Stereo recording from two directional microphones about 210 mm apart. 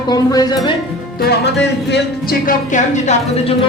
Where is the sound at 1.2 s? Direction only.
50° left (ahead or behind).